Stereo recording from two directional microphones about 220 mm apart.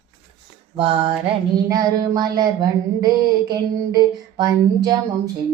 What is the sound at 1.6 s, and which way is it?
Mantra, 15° right (ahead or behind).